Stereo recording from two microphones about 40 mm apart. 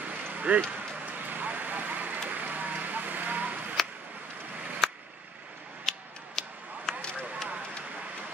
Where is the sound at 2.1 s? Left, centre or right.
Right.